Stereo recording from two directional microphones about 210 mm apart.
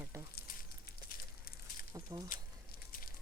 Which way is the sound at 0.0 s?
15° right (ahead or behind).